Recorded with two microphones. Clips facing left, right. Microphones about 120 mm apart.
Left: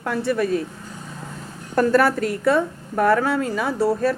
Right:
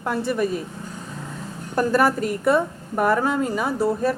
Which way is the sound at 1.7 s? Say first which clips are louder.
Left 2 dB; 10° right (ahead or behind).